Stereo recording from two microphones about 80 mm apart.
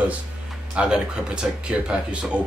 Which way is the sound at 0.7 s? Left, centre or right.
Centre.